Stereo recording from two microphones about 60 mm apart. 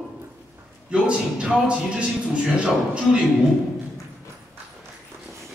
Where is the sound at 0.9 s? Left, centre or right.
Centre.